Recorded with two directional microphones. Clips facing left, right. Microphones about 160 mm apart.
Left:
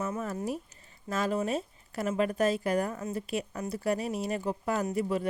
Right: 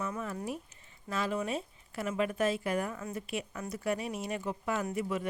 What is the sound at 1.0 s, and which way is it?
Speech, 40° left (ahead or behind).